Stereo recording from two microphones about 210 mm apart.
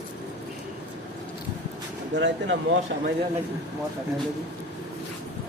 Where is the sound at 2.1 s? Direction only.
60° right (ahead or behind).